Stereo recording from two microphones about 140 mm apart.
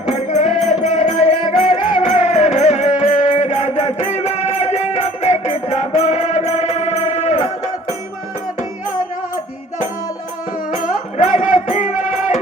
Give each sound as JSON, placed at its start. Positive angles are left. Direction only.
{"t": 0.1, "sound": "music", "side_deg": 55}
{"t": 3.2, "sound": "music", "side_deg": 50}
{"t": 10.7, "sound": "music", "side_deg": 65}